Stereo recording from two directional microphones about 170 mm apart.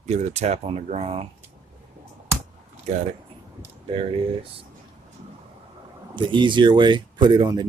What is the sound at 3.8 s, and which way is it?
Speech, 35° right (ahead or behind).